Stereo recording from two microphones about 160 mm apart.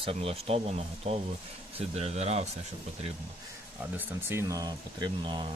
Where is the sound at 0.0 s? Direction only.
35° right (ahead or behind).